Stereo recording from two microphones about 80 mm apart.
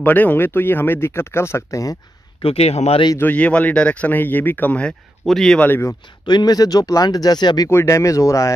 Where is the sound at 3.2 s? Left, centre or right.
Centre.